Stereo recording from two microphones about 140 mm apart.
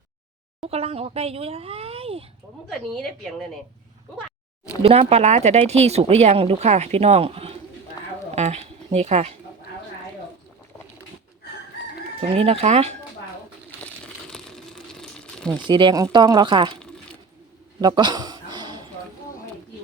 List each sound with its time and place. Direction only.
0.6 s speech: 45° right (ahead or behind)
2.6 s speech: 5° left (ahead or behind)
4.8 s speech: 45° right (ahead or behind)
8.3 s a sound: 50° right (ahead or behind)
12.3 s speech: 45° right (ahead or behind)
13.8 s crumpling: 5° left (ahead or behind)
15.5 s speech: 35° right (ahead or behind)
17.7 s a sound: 30° right (ahead or behind)